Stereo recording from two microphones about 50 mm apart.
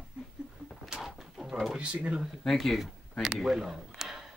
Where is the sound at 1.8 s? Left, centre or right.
Right.